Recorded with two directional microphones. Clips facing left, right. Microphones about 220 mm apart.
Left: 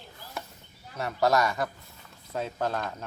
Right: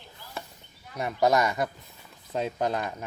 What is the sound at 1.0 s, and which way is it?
Speech, 15° right (ahead or behind).